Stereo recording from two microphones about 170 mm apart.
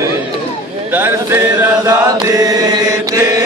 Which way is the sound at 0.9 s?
15° right (ahead or behind).